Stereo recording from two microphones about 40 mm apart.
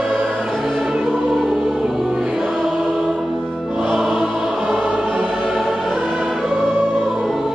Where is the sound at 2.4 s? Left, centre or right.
Centre; by 5.3 s right.